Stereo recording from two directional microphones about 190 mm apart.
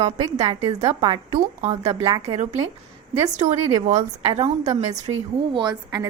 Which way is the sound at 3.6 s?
20° right (ahead or behind).